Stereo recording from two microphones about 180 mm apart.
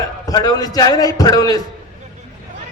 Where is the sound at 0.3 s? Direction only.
20° left (ahead or behind).